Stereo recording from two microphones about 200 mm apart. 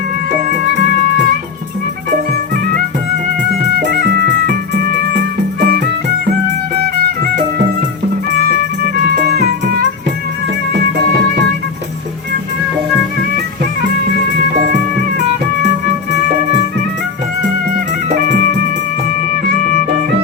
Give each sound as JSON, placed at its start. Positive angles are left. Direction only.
{"t": 3.8, "sound": "music", "side_deg": -55}
{"t": 5.5, "sound": "music", "side_deg": -45}